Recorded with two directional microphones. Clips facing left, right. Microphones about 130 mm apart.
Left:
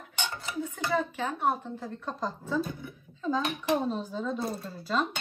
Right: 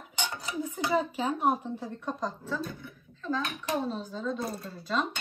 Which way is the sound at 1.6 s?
5° right (ahead or behind).